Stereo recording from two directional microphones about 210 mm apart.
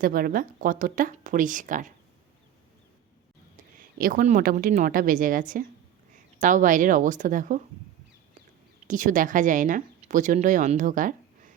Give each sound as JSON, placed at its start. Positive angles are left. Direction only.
{"t": 0.0, "sound": "speech", "side_deg": -45}
{"t": 3.8, "sound": "speech", "side_deg": -40}
{"t": 8.9, "sound": "speech", "side_deg": -40}